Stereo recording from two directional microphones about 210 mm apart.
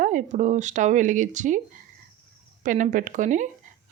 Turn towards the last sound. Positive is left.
turn(degrees=-35)  # may be behind; listen again after turning